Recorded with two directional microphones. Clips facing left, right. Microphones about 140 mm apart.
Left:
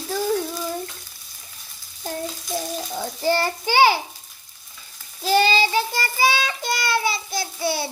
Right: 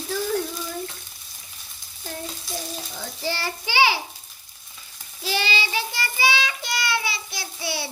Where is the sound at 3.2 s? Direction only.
50° left (ahead or behind).